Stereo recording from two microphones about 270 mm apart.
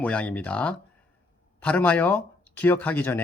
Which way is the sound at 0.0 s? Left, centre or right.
Centre.